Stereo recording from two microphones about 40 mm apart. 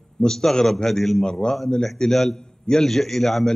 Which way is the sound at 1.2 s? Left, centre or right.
Centre.